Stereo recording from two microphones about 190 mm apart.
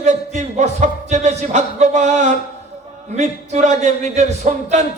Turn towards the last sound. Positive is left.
turn(degrees=-40)  # may be behind; listen again after turning